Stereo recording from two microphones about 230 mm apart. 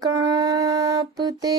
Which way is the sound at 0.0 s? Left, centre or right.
Centre.